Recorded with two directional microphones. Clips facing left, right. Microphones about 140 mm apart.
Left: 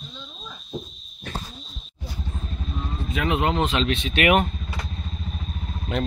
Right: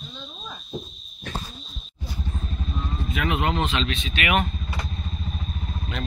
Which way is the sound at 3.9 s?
65° left (ahead or behind).